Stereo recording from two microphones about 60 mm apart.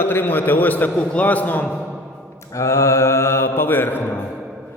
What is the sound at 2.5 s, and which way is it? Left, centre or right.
Speech, left.